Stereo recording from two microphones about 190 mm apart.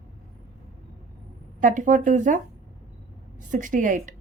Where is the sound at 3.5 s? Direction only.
45° right (ahead or behind).